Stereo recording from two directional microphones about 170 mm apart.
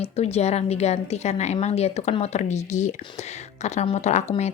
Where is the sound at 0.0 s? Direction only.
40° left (ahead or behind).